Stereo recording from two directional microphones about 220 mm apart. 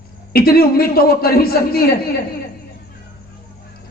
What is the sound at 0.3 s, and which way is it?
A man's voice, 45° left (ahead or behind).